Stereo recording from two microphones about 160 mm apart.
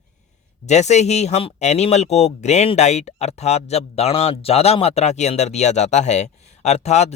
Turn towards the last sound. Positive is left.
turn(degrees=45)  # may be behind; listen again after turning